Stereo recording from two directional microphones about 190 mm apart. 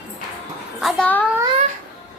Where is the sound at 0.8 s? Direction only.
5° left (ahead or behind).